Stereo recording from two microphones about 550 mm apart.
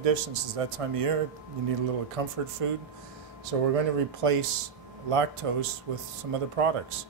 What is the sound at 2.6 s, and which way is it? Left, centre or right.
Speech, right.